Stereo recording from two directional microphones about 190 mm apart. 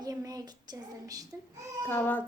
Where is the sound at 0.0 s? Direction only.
20° right (ahead or behind).